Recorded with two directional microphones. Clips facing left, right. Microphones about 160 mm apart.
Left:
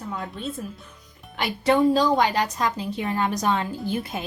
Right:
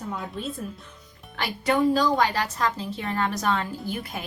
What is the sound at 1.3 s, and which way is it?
A woman's voice, 20° left (ahead or behind).